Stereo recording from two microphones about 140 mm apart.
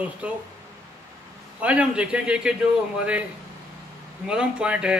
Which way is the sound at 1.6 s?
10° right (ahead or behind).